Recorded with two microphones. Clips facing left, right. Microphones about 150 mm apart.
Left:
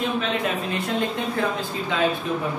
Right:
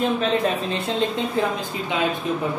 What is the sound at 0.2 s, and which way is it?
Speech, 30° right (ahead or behind).